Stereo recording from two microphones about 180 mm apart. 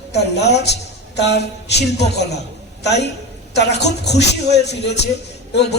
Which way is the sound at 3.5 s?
70° left (ahead or behind).